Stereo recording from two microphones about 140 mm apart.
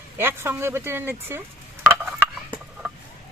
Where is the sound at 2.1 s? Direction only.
5° right (ahead or behind).